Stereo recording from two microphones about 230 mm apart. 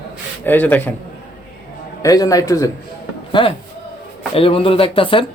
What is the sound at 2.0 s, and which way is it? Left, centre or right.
Speech, centre.